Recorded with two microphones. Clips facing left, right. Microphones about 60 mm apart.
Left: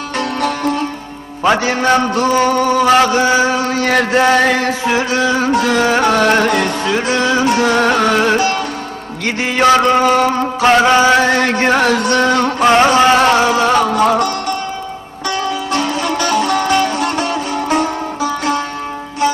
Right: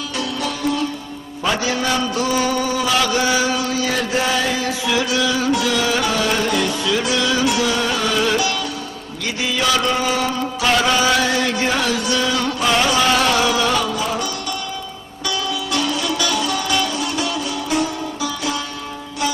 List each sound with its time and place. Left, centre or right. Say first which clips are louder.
0.2 s sitar: left 6 dB; left
1.5 s mantra: left 7 dB; left
4.9 s music: left 4 dB; left
9.2 s mantra: left 8 dB; left
15.3 s music: left 5 dB; left